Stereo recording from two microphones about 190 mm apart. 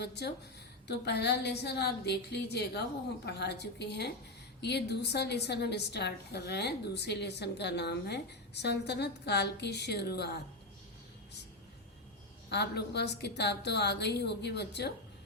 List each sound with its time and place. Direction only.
0.0 s a woman's voice: 60° left (ahead or behind)
12.5 s a woman's voice: 60° left (ahead or behind)